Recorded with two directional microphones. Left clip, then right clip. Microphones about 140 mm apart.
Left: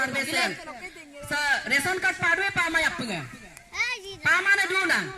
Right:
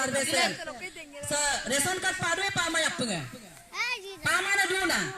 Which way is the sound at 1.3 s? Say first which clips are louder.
Left 5 dB; 15° right (ahead or behind).